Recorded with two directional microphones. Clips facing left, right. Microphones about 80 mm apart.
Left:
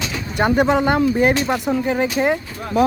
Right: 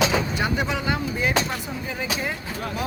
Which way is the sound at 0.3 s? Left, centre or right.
Left.